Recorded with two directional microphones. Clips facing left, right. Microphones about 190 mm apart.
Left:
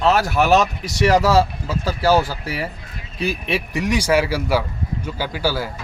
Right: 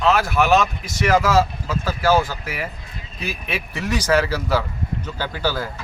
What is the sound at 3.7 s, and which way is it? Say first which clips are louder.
Speech: left 1 dB; 15° left (ahead or behind).